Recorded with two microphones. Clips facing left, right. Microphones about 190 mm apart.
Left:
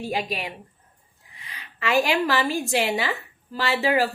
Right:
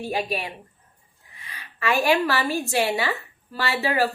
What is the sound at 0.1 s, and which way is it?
A woman's voice, 15° left (ahead or behind).